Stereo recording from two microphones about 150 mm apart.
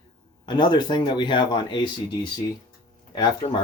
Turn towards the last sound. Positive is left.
turn(degrees=30)  # may be behind; listen again after turning